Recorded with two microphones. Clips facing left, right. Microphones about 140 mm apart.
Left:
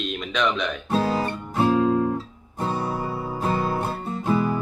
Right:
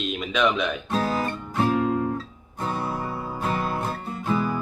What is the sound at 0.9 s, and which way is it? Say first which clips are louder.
Guitar: left 4 dB; 30° left (ahead or behind).